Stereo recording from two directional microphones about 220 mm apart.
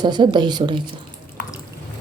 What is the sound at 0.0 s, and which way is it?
Speech, 20° right (ahead or behind).